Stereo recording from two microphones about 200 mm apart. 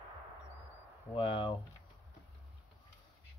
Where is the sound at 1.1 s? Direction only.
25° left (ahead or behind).